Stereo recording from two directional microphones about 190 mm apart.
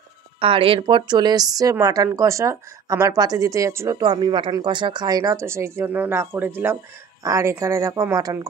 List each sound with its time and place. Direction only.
0.4 s a woman's voice: 30° right (ahead or behind)